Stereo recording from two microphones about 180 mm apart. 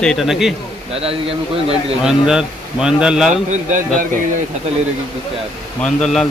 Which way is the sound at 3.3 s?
45° right (ahead or behind).